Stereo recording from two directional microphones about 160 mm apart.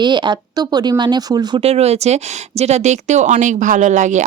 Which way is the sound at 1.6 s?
40° right (ahead or behind).